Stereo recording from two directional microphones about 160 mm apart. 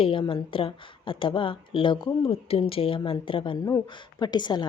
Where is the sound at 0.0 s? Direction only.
35° left (ahead or behind).